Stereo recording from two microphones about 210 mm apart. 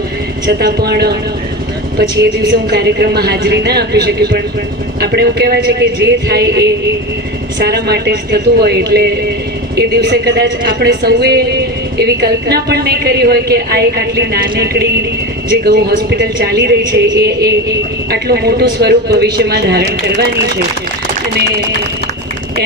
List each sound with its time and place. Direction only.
0.4 s a woman's voice: 50° right (ahead or behind)